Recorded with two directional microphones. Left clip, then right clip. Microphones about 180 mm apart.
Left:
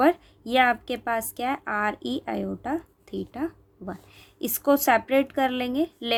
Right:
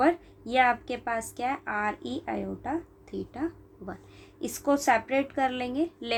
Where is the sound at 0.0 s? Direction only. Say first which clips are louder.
Left 3 dB; 50° left (ahead or behind).